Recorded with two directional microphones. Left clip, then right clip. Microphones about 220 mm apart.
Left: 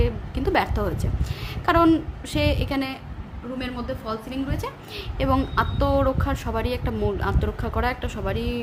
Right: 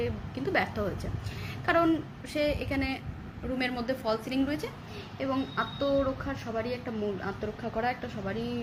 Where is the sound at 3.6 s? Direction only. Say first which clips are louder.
Even; 25° right (ahead or behind).